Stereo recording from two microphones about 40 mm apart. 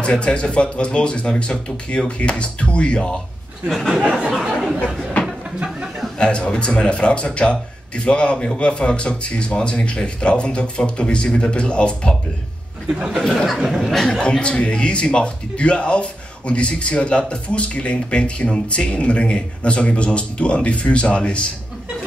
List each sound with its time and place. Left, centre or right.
0.0 s speech: left
3.6 s speech: centre
4.0 s a sound: right
4.3 s chatter: centre
6.1 s speech: left
13.7 s speech: centre
14.2 s speech: left